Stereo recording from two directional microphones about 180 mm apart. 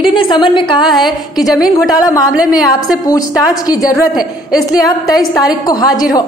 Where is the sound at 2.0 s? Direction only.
20° left (ahead or behind).